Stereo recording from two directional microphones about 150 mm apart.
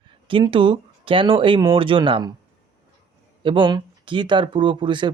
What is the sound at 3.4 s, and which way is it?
Speech, 35° right (ahead or behind).